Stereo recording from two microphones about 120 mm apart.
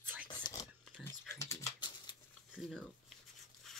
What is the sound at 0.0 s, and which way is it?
Whispering, 15° right (ahead or behind).